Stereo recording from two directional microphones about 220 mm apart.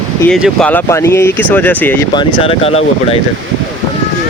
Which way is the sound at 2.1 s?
25° left (ahead or behind).